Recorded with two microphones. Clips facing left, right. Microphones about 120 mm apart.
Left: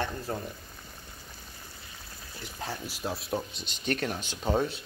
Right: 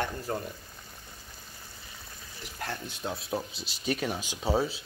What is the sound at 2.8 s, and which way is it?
Speech, 5° left (ahead or behind).